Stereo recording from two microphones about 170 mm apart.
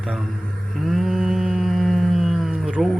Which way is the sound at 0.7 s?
Centre (ahead or behind).